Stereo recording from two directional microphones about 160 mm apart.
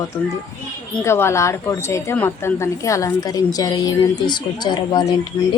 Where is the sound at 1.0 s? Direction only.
15° left (ahead or behind).